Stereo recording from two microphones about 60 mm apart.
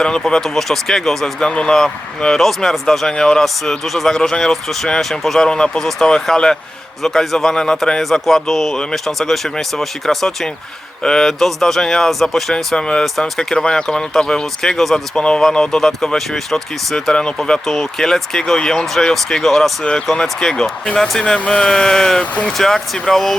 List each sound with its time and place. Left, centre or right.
0.0 s speech: centre